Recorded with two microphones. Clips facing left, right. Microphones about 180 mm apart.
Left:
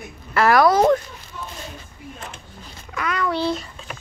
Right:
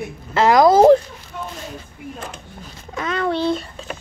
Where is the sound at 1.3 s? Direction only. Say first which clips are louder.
Right 5 dB; 60° right (ahead or behind).